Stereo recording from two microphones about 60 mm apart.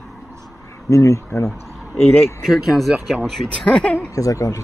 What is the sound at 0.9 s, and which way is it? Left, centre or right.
Speech, left.